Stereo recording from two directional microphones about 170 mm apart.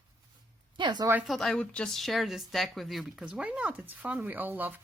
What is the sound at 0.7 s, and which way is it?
Speech, 25° right (ahead or behind).